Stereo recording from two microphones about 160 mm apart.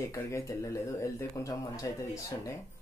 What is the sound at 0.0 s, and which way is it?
Speech, 15° left (ahead or behind).